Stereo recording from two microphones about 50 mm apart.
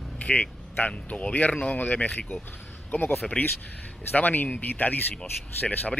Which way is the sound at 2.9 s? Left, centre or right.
Left.